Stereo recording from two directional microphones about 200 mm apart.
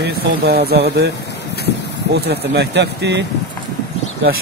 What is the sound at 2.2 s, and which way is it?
Speech, 55° right (ahead or behind).